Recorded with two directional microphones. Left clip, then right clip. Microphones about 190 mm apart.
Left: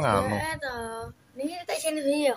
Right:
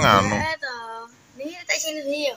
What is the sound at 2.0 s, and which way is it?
Speech, 30° left (ahead or behind).